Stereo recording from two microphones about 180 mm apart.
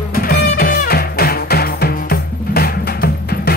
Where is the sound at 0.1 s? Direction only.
55° left (ahead or behind).